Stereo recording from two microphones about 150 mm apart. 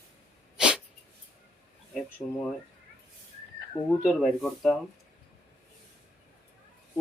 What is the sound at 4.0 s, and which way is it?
Speech, centre (ahead or behind).